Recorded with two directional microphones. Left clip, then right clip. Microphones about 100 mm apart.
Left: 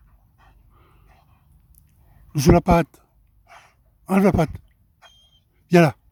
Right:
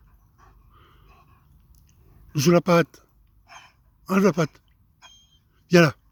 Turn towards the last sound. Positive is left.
turn(degrees=40)  # may be behind; listen again after turning